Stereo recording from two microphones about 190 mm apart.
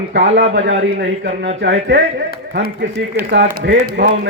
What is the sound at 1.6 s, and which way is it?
Speech, 65° right (ahead or behind).